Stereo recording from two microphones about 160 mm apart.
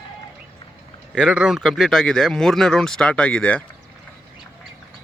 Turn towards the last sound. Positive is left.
turn(degrees=5)  # may be behind; listen again after turning